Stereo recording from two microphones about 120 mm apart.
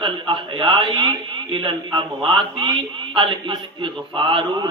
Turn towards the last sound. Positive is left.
turn(degrees=-45)  # may be behind; listen again after turning